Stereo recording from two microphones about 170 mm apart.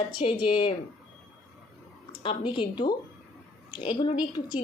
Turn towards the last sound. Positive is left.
turn(degrees=25)  # may be behind; listen again after turning